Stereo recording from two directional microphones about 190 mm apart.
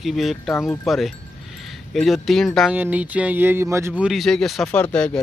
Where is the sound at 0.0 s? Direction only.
Centre (ahead or behind).